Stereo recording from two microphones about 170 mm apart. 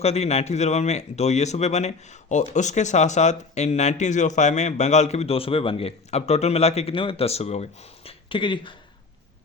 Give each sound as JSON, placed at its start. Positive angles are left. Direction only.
{"t": 0.0, "sound": "speech", "side_deg": 40}